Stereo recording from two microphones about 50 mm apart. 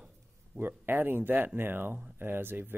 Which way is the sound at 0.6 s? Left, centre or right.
Right.